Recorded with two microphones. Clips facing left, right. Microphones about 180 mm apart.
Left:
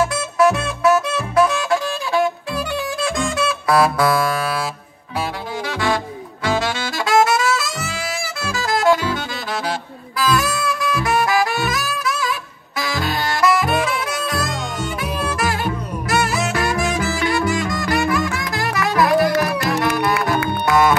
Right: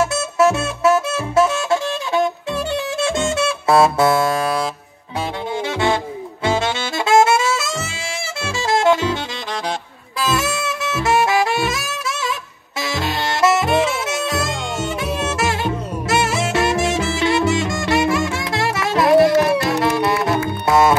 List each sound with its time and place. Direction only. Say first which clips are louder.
0.0 s music: even; 25° right (ahead or behind)
5.7 s music: right 2 dB; 25° right (ahead or behind)
6.4 s saxophone: right 1 dB; 25° right (ahead or behind)
20.3 s music: left 1 dB; 70° left (ahead or behind)
20.6 s music: right 2 dB; 25° right (ahead or behind)